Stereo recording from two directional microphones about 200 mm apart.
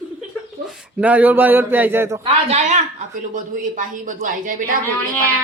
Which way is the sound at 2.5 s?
35° right (ahead or behind).